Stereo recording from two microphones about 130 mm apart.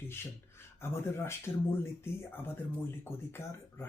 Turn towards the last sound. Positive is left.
turn(degrees=20)  # may be behind; listen again after turning